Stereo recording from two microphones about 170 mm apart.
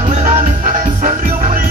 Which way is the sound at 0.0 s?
45° right (ahead or behind).